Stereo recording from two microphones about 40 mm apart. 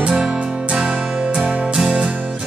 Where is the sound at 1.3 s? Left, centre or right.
Centre.